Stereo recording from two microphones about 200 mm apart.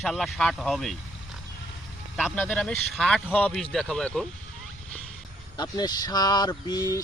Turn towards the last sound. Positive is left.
turn(degrees=15)  # may be behind; listen again after turning